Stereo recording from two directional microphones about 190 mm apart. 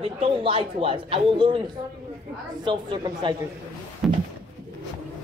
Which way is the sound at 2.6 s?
25° right (ahead or behind).